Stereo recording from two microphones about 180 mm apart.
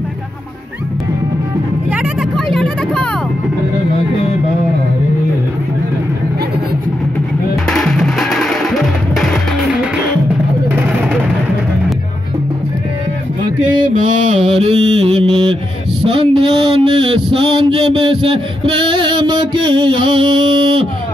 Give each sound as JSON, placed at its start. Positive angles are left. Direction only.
{"t": 1.9, "sound": "vehicle", "side_deg": 0}
{"t": 7.6, "sound": "music", "side_deg": 0}
{"t": 14.2, "sound": "mantra", "side_deg": -40}
{"t": 16.1, "sound": "a sound", "side_deg": -30}